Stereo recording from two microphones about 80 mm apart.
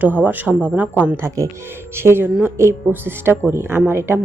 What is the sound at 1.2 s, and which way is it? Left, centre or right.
A woman's voice, right.